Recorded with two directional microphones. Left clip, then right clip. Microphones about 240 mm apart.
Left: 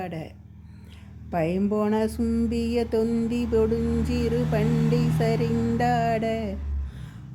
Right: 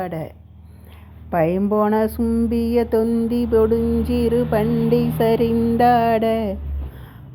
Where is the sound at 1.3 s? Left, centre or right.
Centre.